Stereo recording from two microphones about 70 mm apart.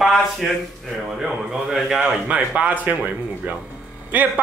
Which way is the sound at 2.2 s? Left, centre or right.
Centre.